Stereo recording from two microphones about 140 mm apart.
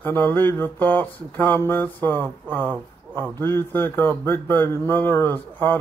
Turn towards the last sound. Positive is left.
turn(degrees=15)  # may be behind; listen again after turning